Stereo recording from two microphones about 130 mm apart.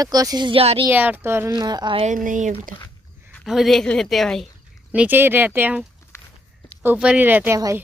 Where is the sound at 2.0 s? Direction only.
85° right.